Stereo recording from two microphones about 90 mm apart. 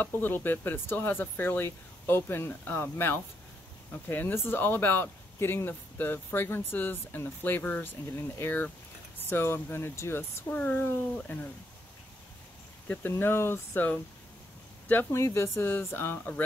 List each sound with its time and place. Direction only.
0.0 s speech: 20° left (ahead or behind)
12.8 s speech: 20° left (ahead or behind)